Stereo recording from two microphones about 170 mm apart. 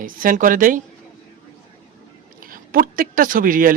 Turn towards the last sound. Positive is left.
turn(degrees=-55)  # may be behind; listen again after turning